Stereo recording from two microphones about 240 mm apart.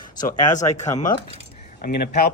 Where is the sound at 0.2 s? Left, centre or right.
Left.